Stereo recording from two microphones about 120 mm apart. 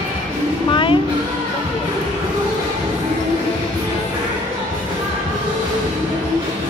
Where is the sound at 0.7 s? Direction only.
45° left (ahead or behind).